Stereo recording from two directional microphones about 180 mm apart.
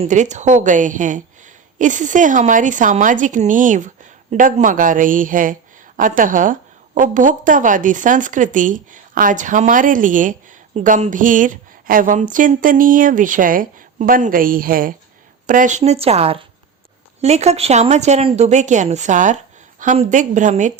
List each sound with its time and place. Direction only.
0.0 s a woman's voice: 40° right (ahead or behind)